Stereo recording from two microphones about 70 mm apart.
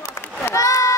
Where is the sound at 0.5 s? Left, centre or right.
Left.